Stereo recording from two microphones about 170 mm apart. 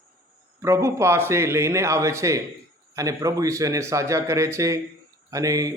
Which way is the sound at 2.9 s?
20° right (ahead or behind).